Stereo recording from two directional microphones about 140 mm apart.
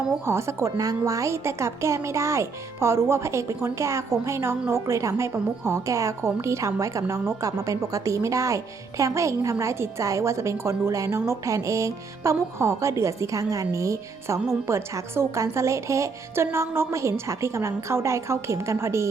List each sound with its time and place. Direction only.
0.3 s a woman's voice: 20° right (ahead or behind)